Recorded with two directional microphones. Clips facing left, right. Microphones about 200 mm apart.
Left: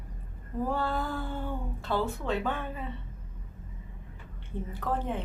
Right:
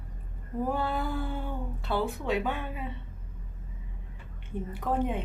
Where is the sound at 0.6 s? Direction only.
15° right (ahead or behind).